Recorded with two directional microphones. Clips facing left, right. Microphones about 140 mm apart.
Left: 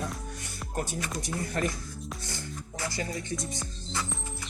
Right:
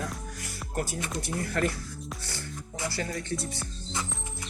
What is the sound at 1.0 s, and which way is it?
Speech, 25° right (ahead or behind).